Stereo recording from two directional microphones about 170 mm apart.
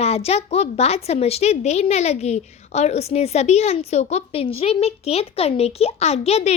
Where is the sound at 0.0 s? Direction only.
40° left (ahead or behind).